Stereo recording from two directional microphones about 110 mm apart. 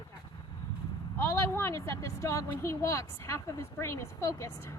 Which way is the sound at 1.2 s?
20° left (ahead or behind).